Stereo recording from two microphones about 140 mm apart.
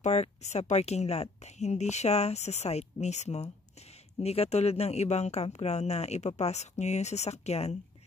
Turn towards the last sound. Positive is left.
turn(degrees=50)  # may be behind; listen again after turning